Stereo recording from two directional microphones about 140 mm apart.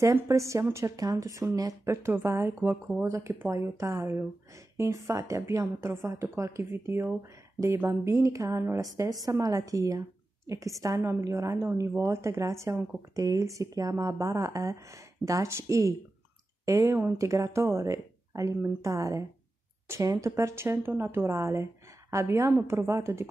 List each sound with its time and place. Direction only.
0.0 s a woman's voice: 20° right (ahead or behind)